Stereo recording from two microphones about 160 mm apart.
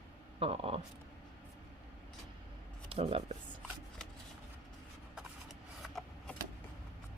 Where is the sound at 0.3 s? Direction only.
35° right (ahead or behind).